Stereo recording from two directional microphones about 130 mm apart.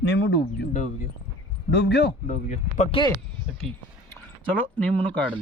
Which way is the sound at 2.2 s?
60° left (ahead or behind).